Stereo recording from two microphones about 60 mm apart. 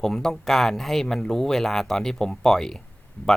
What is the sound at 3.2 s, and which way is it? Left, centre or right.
Speech, left.